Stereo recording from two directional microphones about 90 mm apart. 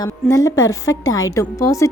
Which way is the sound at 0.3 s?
35° left (ahead or behind).